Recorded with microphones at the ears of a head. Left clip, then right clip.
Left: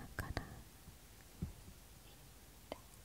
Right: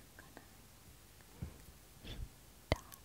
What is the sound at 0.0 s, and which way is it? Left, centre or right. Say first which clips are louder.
Whispering: left 11 dB; left.